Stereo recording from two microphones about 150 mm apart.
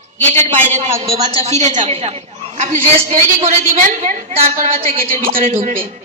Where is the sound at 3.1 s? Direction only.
55° right (ahead or behind).